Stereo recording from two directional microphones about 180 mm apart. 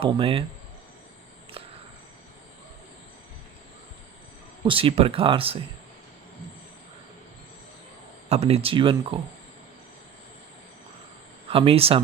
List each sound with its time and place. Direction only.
0.0 s speech: 30° right (ahead or behind)
1.6 s a sound: 30° right (ahead or behind)
4.6 s speech: 30° right (ahead or behind)
8.3 s speech: 35° right (ahead or behind)
11.4 s speech: 30° right (ahead or behind)